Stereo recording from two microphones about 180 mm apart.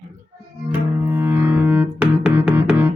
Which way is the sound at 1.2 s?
10° right (ahead or behind).